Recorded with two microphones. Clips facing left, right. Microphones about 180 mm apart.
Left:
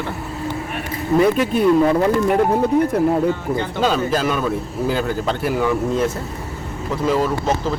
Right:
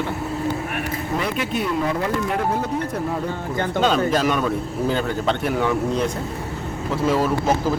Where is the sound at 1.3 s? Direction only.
45° left (ahead or behind).